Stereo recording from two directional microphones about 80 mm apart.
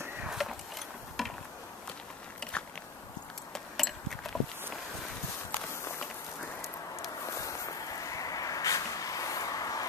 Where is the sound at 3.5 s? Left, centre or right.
Centre.